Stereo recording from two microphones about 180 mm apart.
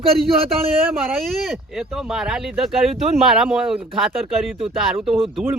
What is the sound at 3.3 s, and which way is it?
Speech, centre (ahead or behind).